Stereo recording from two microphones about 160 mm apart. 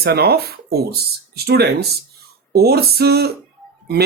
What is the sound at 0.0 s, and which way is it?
Speech, 80° right.